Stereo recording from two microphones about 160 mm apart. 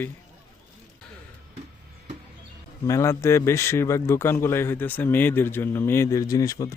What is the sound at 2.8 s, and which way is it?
A man's voice, 20° left (ahead or behind).